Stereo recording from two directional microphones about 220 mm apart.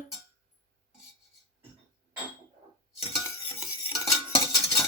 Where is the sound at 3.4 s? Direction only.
25° left (ahead or behind).